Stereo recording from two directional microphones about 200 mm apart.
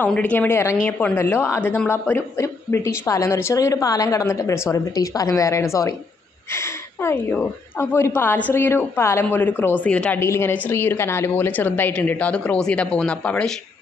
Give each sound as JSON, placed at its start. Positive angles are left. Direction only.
{"t": 0.0, "sound": "a woman's voice", "side_deg": 5}